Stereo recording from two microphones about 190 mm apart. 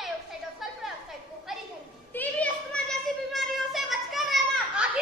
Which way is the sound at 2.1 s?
10° left (ahead or behind).